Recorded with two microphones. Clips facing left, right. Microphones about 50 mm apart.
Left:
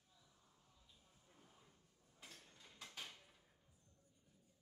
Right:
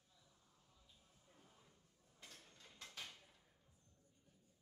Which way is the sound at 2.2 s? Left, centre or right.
Centre.